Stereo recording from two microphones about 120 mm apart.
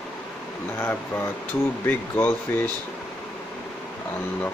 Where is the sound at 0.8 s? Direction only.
15° left (ahead or behind).